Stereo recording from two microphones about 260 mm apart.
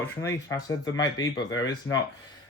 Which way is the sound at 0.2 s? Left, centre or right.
Centre.